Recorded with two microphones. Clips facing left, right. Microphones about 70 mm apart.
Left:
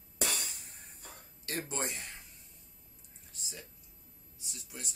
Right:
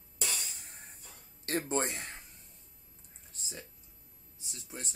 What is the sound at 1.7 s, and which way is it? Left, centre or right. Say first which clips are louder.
Speech: right 5 dB; right.